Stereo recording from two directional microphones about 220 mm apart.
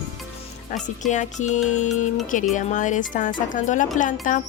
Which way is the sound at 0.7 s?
35° left (ahead or behind).